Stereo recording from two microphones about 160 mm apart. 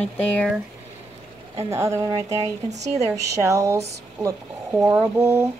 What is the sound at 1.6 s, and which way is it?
Speech, 15° right (ahead or behind).